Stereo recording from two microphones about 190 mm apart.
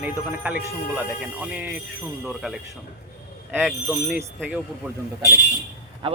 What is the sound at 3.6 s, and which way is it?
Speech, centre (ahead or behind).